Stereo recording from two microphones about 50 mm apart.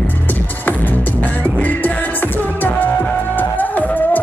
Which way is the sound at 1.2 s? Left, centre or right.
Left.